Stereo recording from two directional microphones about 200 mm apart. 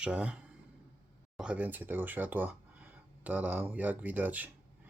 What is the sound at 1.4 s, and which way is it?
Speech, 5° right (ahead or behind).